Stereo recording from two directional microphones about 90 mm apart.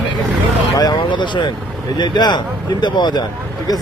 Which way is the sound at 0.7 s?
45° left (ahead or behind).